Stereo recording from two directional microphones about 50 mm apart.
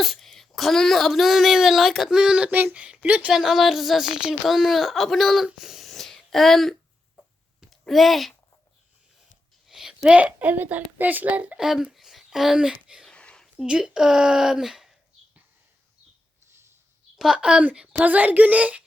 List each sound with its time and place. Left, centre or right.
0.0 s speech: centre
2.0 s speech: centre
3.3 s speech: centre
5.5 s a sound: centre
7.7 s speech: centre
9.6 s a sound: centre
10.1 s a child's voice: right
11.5 s speech: centre
13.1 s a sound: centre
13.7 s speech: centre
17.3 s speech: centre
18.0 s a child's voice: right